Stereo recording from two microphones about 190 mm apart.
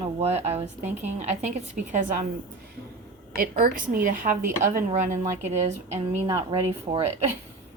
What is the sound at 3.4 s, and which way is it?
A woman's voice, 50° right (ahead or behind).